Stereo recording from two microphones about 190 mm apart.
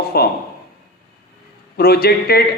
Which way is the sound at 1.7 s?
55° left (ahead or behind).